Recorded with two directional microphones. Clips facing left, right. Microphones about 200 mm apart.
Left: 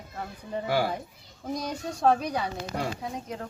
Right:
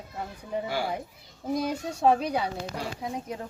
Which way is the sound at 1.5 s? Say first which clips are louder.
Right 3 dB; 5° right (ahead or behind).